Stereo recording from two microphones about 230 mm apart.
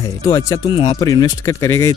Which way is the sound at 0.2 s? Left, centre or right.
Centre.